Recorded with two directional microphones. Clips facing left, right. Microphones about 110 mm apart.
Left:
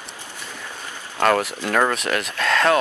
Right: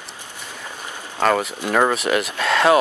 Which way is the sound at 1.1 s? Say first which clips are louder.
Even; 5° right (ahead or behind).